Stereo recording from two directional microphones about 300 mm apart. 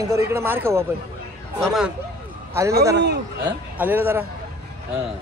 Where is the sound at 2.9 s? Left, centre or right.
Right.